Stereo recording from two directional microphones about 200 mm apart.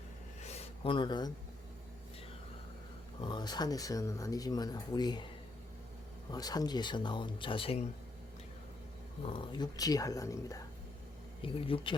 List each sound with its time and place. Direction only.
0.4 s a sound: 30° left (ahead or behind)
3.2 s speech: 25° left (ahead or behind)
6.3 s speech: 20° left (ahead or behind)
9.2 s speech: 25° left (ahead or behind)
11.4 s speech: 25° left (ahead or behind)